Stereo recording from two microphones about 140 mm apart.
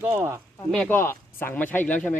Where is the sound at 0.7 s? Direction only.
10° left (ahead or behind).